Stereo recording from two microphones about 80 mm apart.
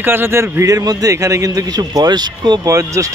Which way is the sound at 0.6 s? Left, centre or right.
Right.